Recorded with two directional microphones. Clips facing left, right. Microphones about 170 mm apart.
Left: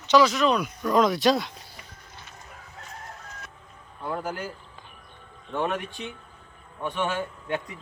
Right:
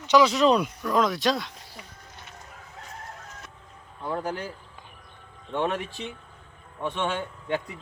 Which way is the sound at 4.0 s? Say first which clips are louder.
Right 1 dB; 5° left (ahead or behind).